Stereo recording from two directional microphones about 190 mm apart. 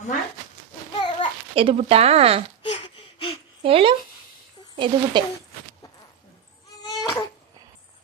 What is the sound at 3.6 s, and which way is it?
Speech, 30° right (ahead or behind).